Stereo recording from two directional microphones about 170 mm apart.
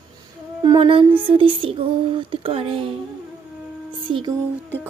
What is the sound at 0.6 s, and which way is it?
Speech, 30° right (ahead or behind).